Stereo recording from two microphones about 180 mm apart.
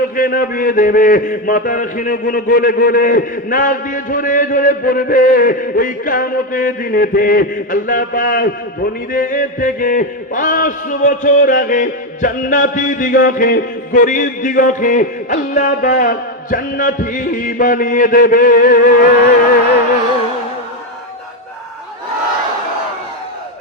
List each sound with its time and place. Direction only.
0.2 s a man's voice: 50° left (ahead or behind)